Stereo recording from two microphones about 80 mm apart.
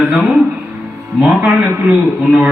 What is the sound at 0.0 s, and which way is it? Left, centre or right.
Speech, centre.